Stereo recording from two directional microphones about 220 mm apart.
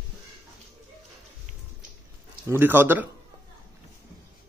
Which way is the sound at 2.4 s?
10° right (ahead or behind).